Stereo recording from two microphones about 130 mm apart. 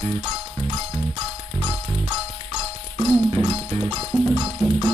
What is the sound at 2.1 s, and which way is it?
Music, 50° right (ahead or behind).